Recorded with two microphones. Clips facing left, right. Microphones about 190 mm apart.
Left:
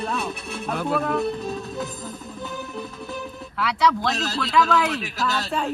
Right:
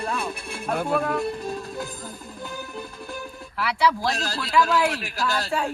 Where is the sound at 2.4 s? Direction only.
Centre (ahead or behind).